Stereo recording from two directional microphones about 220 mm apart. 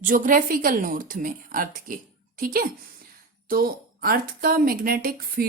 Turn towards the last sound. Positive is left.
turn(degrees=-40)  # may be behind; listen again after turning